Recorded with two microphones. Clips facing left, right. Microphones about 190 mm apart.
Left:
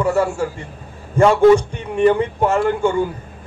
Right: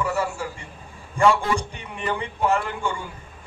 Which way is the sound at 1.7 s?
50° left (ahead or behind).